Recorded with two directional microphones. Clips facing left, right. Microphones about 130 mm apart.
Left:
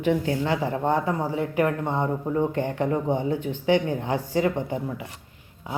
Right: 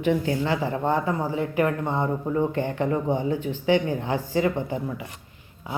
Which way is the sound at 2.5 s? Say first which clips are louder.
Even; 40° left (ahead or behind).